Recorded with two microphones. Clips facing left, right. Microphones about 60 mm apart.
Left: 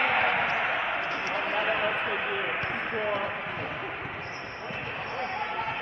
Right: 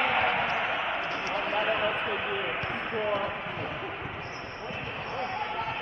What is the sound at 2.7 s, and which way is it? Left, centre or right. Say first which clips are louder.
Basketball bounce: left 1 dB; left.